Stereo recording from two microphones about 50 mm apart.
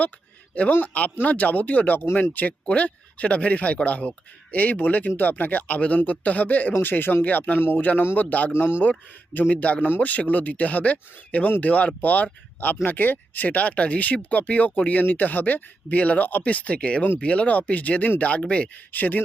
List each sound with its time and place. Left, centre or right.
0.7 s speech: left
8.5 s speech: left
8.8 s speech: left
18.9 s speech: left